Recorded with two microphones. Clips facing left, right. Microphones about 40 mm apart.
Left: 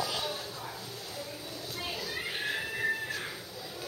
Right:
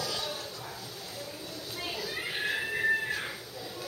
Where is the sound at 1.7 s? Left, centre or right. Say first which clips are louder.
Right 1 dB; centre.